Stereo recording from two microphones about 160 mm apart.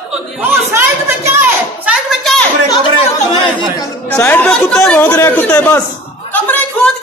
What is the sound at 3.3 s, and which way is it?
Speech, 30° left (ahead or behind).